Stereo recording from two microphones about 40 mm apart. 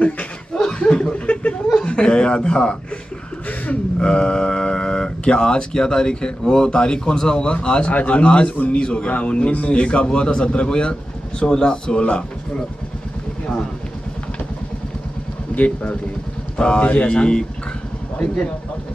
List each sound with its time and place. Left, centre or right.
0.7 s chuckle: centre
1.2 s laughter: left
1.8 s speech: left
3.4 s a sound: left
4.0 s speech: left
7.9 s speech: left
8.2 s speech: left
15.5 s speech: left
16.5 s speech: left
16.8 s speech: left
17.1 s speech: left